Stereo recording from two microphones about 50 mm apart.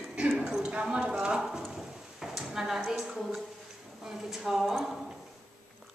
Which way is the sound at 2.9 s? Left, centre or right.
Centre.